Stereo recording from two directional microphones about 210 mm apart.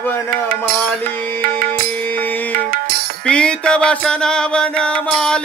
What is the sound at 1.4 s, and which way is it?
Music, 40° right (ahead or behind).